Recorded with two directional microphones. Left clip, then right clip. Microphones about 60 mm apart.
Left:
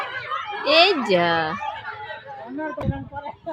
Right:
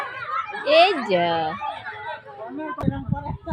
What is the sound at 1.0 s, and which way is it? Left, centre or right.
Speech, left.